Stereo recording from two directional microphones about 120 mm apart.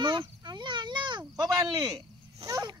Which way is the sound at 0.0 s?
40° right (ahead or behind).